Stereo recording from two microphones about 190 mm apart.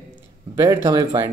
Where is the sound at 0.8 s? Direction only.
20° right (ahead or behind).